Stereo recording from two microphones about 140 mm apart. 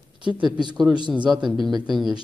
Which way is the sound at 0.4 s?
30° right (ahead or behind).